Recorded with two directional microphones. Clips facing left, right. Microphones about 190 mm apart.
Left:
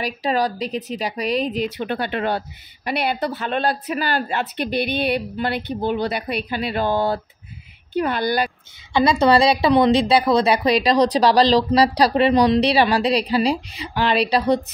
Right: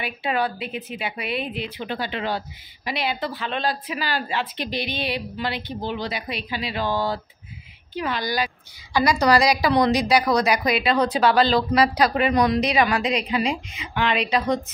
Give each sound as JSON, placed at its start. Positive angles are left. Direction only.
{"t": 0.0, "sound": "speech", "side_deg": 35}
{"t": 8.9, "sound": "a woman's voice", "side_deg": 25}